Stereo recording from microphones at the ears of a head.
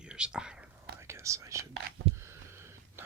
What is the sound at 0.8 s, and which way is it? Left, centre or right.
Whispering, right.